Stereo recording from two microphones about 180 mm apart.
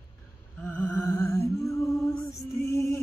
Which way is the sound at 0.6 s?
10° left (ahead or behind).